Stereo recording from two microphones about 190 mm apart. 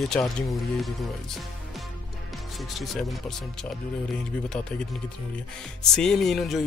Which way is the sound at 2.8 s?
Centre (ahead or behind).